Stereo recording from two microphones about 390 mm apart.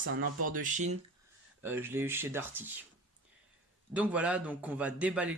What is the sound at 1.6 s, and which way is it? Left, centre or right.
Speech, centre.